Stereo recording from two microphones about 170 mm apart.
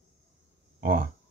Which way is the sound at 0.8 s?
55° right (ahead or behind).